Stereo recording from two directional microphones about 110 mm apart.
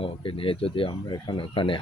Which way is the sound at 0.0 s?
55° left (ahead or behind).